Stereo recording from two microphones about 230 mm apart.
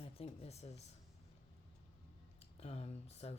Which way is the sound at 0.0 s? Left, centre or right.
Left.